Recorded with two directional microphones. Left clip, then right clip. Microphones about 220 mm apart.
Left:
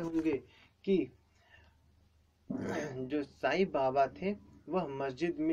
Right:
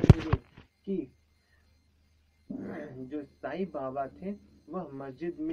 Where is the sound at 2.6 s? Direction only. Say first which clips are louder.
Left 6 dB; 25° left (ahead or behind).